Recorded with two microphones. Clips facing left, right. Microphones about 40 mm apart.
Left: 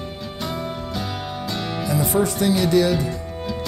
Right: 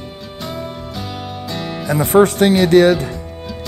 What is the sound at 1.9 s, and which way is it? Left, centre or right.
Speech, right.